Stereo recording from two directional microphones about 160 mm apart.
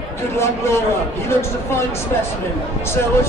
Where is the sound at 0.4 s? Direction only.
15° left (ahead or behind).